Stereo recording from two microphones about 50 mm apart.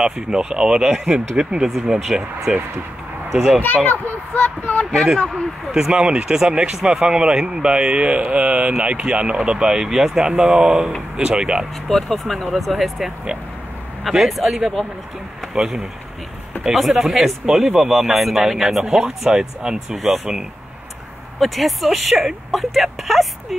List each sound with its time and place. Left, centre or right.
0.0 s speech: centre
1.7 s speech: centre
3.6 s a child's voice: left
4.9 s speech: centre
5.7 s speech: centre
11.9 s speech: centre
14.3 s speech: centre
21.4 s speech: centre